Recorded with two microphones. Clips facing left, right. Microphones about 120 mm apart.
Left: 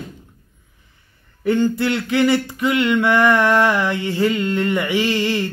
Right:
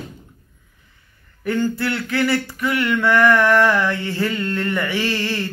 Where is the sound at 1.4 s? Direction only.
20° left (ahead or behind).